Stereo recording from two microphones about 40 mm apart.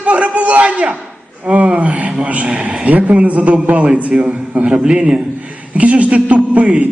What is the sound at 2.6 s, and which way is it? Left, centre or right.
A man's voice, right.